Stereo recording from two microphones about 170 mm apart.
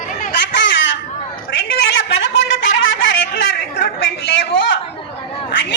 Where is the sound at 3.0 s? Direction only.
90° left.